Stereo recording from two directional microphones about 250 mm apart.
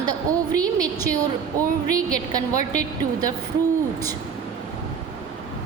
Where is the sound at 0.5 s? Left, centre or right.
Centre.